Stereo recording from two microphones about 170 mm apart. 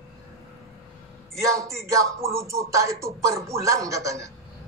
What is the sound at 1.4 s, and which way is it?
Speech, 20° right (ahead or behind).